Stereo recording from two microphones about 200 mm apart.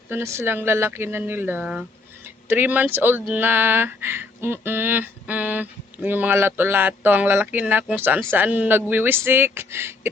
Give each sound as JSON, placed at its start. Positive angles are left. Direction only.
{"t": 0.1, "sound": "speech", "side_deg": -15}